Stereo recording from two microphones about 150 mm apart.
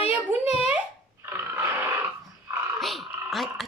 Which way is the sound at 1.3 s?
15° right (ahead or behind).